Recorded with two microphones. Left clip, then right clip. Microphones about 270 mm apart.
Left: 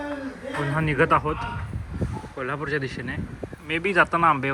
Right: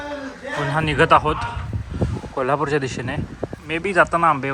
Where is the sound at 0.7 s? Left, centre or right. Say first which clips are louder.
Right 6 dB; centre.